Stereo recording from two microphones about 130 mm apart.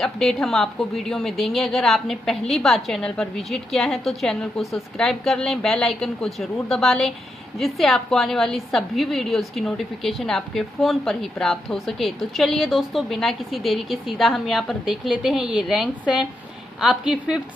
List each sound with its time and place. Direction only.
0.0 s a woman's voice: centre (ahead or behind)